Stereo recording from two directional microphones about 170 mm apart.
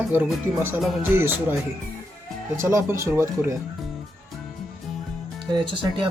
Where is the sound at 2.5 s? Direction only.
15° right (ahead or behind).